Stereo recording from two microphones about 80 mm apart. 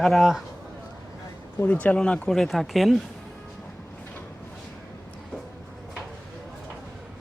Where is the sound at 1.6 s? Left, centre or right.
Left; by 3.0 s centre.